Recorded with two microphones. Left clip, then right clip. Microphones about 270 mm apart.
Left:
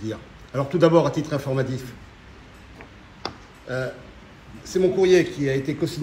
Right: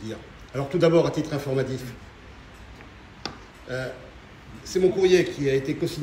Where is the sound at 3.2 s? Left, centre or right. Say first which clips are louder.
Left 3 dB; centre.